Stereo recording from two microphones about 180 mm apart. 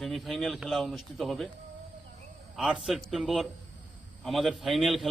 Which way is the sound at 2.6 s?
5° right (ahead or behind).